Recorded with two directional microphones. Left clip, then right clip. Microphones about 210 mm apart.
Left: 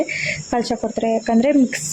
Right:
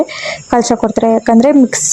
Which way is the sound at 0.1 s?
25° right (ahead or behind).